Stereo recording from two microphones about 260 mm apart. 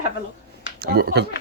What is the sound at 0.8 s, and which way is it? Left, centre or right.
Speech, right.